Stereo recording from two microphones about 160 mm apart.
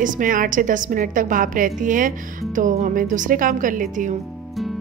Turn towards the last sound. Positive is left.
turn(degrees=-55)  # may be behind; listen again after turning